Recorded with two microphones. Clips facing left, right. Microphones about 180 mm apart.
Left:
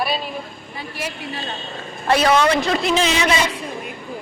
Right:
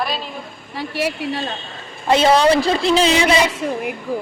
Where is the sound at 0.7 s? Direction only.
70° right (ahead or behind).